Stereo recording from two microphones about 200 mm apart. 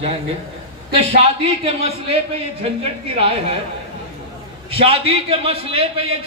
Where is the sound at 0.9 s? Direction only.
30° right (ahead or behind).